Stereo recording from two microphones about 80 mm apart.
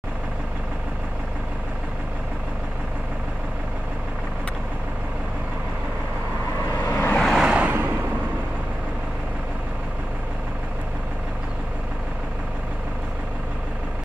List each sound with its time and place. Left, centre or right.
6.9 s vehicle: left
7.2 s vehicle: centre
7.4 s a sound: centre